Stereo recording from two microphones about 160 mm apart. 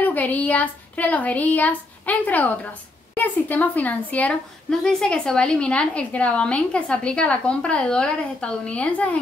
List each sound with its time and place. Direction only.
0.0 s a woman's voice: 10° left (ahead or behind)